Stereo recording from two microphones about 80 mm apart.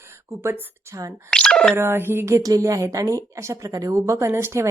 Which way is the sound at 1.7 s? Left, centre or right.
Right.